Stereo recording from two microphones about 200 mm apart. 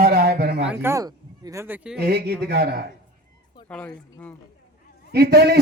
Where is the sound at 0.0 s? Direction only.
50° right (ahead or behind).